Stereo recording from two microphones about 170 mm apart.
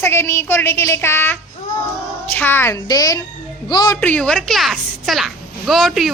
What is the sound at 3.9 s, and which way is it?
A child's voice, 10° left (ahead or behind).